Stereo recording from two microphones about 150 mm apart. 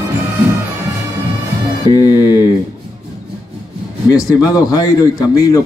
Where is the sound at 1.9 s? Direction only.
25° left (ahead or behind).